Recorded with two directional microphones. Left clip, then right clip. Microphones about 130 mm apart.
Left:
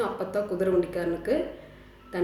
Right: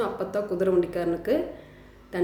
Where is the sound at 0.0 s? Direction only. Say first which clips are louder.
Right 1 dB; 20° right (ahead or behind).